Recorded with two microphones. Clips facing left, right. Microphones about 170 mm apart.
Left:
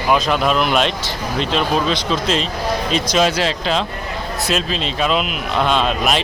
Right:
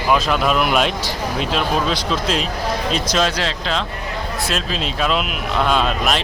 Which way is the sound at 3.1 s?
10° left (ahead or behind).